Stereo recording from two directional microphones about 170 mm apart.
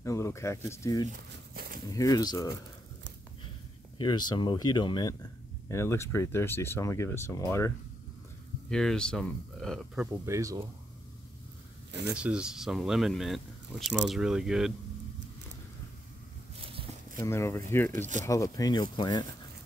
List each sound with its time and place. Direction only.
0.0 s speech: 15° left (ahead or behind)
1.5 s a sound: 65° right (ahead or behind)
1.9 s speech: 20° left (ahead or behind)
4.0 s speech: 25° left (ahead or behind)
8.6 s speech: 5° left (ahead or behind)
10.2 s speech: 20° right (ahead or behind)
12.1 s speech: 5° right (ahead or behind)
17.2 s speech: 15° left (ahead or behind)